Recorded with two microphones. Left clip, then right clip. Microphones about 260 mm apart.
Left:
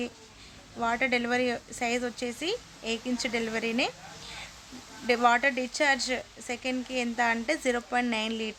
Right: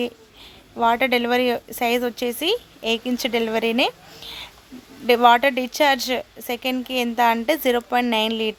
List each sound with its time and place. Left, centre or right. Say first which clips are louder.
0.8 s speech: right 9 dB; right
5.0 s speech: right 9 dB; right